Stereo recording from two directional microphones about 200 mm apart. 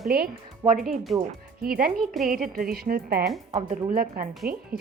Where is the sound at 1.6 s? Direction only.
45° right (ahead or behind).